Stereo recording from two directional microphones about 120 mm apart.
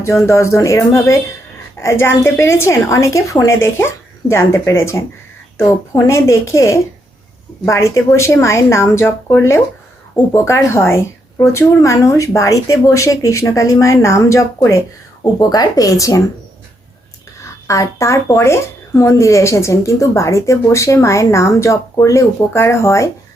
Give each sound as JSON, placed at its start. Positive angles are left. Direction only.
{"t": 0.3, "sound": "speech", "side_deg": 25}
{"t": 17.4, "sound": "speech", "side_deg": 25}